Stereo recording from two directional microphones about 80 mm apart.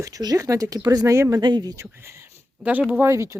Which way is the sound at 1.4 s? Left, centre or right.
Right.